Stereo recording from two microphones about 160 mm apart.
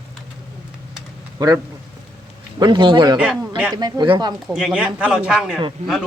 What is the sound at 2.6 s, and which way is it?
Speech, 30° right (ahead or behind).